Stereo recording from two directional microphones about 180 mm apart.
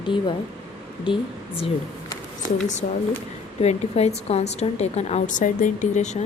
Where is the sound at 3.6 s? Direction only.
35° left (ahead or behind).